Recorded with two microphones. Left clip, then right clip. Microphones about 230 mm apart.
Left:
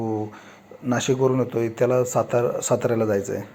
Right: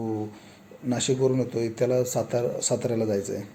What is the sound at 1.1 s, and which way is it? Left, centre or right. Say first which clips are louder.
A man's voice: left 3 dB; centre.